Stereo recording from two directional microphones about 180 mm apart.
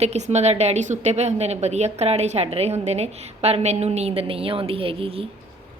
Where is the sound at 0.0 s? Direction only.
35° right (ahead or behind).